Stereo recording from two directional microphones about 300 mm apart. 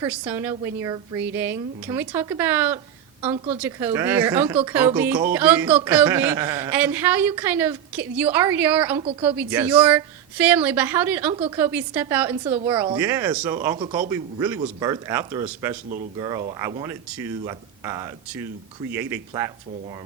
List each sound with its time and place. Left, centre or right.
0.0 s speech: centre
3.3 s speech: right
3.6 s speech: centre